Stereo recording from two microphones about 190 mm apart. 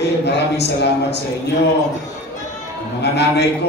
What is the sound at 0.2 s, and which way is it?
A man's voice, 60° left (ahead or behind).